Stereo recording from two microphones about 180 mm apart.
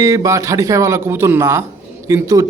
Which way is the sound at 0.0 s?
15° right (ahead or behind).